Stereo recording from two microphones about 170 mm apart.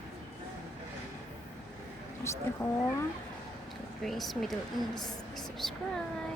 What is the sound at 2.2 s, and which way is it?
Speech, 15° left (ahead or behind).